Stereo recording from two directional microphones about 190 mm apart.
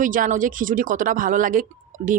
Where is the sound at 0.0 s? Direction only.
45° right (ahead or behind).